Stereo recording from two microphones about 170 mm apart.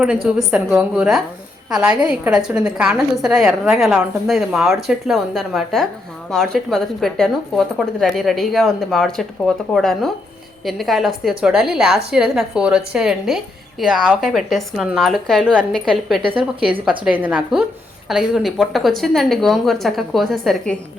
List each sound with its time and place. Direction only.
0.3 s a woman's voice: 5° right (ahead or behind)
16.2 s speech: 30° right (ahead or behind)
17.0 s a woman's voice: 10° right (ahead or behind)